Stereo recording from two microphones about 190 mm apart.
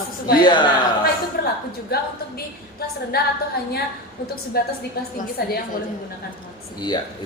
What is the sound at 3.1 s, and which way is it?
Speech, 55° left (ahead or behind).